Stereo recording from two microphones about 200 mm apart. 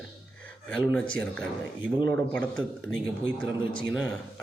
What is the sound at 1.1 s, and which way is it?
A man's voice, 5° left (ahead or behind).